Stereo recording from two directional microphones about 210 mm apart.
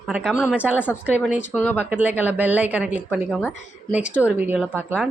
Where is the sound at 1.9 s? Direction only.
10° right (ahead or behind).